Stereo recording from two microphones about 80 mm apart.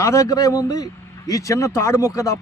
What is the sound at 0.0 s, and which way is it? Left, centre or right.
A man's voice, left.